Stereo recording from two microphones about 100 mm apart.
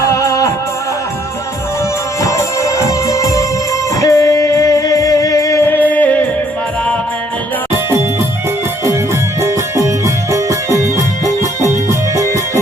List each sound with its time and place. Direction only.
0.1 s music: 30° left (ahead or behind)
2.2 s music: 30° left (ahead or behind)
9.4 s music: 30° right (ahead or behind)